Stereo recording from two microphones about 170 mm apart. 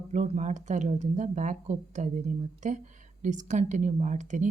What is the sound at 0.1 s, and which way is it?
Speech, 45° right (ahead or behind).